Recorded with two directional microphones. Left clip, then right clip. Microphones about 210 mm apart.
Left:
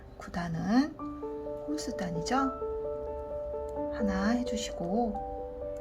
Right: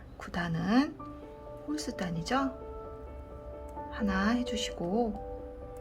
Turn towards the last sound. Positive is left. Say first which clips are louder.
# even
turn(degrees=-5)  # may be behind; listen again after turning